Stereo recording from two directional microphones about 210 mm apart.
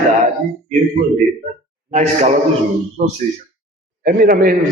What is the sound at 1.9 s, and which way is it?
Speech, 35° right (ahead or behind).